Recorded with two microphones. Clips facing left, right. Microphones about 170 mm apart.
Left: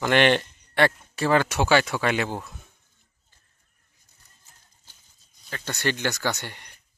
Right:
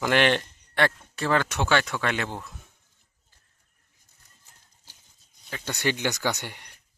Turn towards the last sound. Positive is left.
turn(degrees=-10)  # may be behind; listen again after turning